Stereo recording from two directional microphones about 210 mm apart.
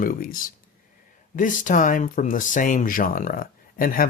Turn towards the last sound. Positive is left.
turn(degrees=40)  # may be behind; listen again after turning